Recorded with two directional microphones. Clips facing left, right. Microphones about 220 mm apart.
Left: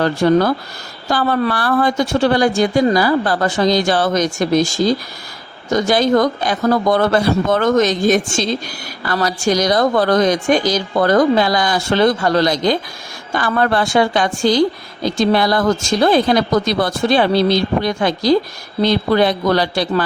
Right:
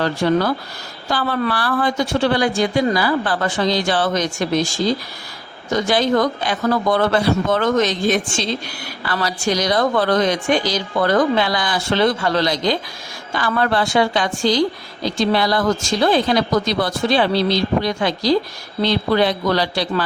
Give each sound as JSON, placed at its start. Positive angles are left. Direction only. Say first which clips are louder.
{"t": 0.0, "sound": "a woman's voice", "louder": "left 4 dB", "side_deg": 45}